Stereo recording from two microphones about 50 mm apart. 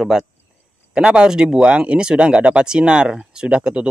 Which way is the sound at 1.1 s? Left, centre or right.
Centre.